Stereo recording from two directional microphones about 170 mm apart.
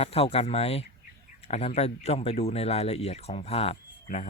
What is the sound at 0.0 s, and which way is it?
Speech, 35° left (ahead or behind).